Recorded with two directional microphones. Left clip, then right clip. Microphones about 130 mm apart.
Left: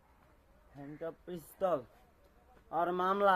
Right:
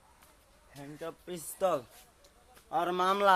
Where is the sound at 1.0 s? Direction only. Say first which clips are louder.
Right 2 dB; 30° right (ahead or behind).